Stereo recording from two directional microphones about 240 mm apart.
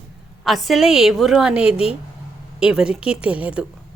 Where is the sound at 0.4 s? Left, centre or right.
Centre.